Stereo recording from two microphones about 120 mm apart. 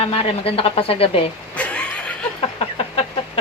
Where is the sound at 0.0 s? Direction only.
55° left (ahead or behind).